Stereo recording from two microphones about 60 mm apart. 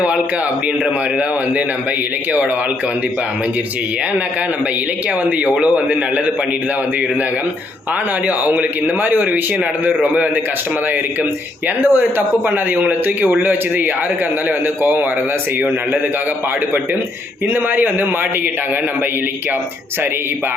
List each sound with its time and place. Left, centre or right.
5.6 s a man's voice: right
8.4 s a man's voice: right
11.8 s a man's voice: right
17.5 s speech: right